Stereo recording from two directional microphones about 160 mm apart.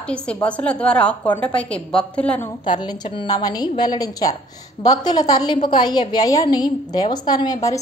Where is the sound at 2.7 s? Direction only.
30° left (ahead or behind).